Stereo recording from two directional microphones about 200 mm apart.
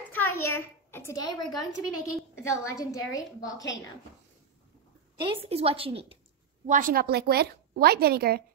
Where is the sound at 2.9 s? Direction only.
15° left (ahead or behind).